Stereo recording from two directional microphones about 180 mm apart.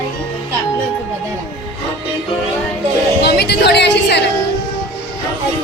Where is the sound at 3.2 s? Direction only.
65° left (ahead or behind).